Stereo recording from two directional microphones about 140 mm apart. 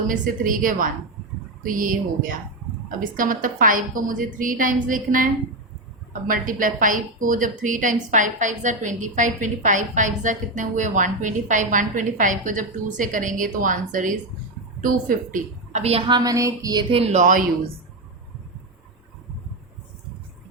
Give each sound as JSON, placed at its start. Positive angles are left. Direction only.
{"t": 0.1, "sound": "a woman's voice", "side_deg": -75}
{"t": 16.9, "sound": "speech", "side_deg": -50}